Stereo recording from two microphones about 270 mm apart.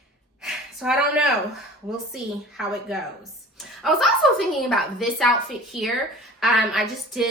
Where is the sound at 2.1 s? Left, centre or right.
Centre.